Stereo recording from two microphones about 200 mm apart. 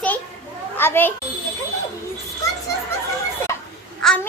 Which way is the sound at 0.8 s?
10° left (ahead or behind).